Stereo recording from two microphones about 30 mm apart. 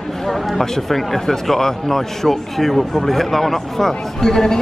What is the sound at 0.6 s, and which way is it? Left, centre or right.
A man's voice, centre.